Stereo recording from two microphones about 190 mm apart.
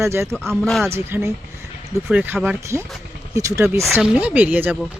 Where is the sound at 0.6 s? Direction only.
Centre (ahead or behind).